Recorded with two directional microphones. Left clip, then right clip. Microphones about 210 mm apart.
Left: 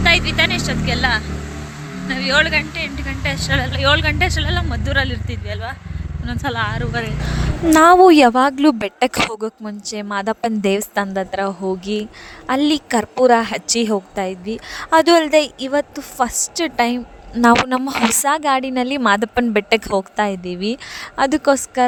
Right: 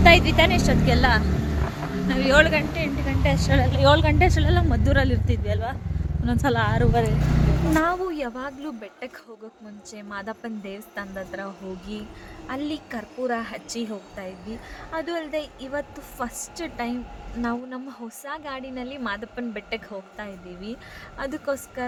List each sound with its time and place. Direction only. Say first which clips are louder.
0.0 s a woman's voice: left 1 dB; 15° right (ahead or behind)
7.7 s a woman's voice: left 16 dB; 45° left (ahead or behind)